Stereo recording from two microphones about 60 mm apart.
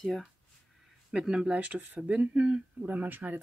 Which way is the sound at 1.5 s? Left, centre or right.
Right.